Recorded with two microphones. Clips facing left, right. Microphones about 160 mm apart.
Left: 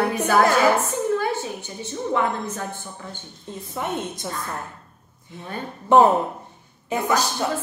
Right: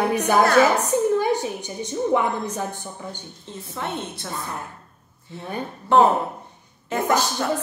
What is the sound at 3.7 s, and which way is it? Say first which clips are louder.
Speech: left 2 dB; 15° left (ahead or behind).